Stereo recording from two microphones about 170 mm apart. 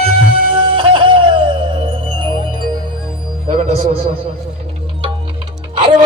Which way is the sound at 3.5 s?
40° right (ahead or behind).